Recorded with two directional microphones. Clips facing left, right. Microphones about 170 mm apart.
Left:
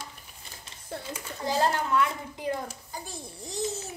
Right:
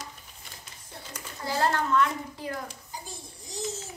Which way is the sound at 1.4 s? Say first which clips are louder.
Left 1 dB; 20° left (ahead or behind).